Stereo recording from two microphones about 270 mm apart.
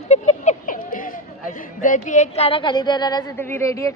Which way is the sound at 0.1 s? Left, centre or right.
Left.